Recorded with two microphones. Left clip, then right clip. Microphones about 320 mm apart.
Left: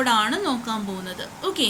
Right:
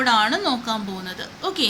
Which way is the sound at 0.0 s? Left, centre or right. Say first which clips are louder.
Right 2 dB; centre.